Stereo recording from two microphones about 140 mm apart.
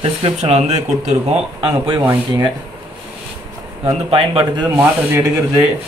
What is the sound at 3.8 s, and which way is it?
Speech, 40° right (ahead or behind).